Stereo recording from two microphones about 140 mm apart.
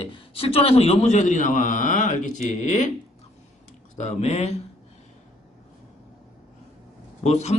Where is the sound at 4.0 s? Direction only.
50° left (ahead or behind).